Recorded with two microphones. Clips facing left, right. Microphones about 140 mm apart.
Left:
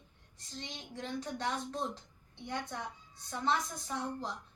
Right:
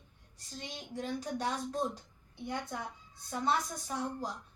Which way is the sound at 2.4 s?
10° right (ahead or behind).